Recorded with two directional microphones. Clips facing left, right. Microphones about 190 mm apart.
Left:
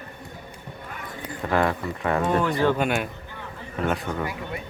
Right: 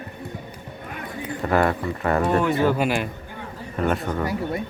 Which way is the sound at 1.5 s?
Centre (ahead or behind).